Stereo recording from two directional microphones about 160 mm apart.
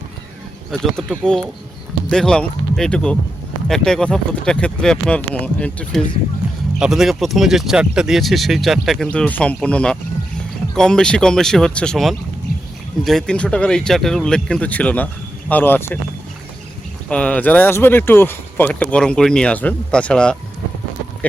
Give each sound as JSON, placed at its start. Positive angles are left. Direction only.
{"t": 0.7, "sound": "speech", "side_deg": 0}
{"t": 6.7, "sound": "speech", "side_deg": -5}
{"t": 17.1, "sound": "speech", "side_deg": 5}